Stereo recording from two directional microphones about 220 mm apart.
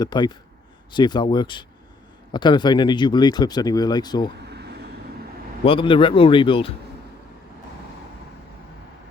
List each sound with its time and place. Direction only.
0.0 s speech: 20° left (ahead or behind)
4.4 s vehicle: 50° right (ahead or behind)
5.6 s speech: 20° left (ahead or behind)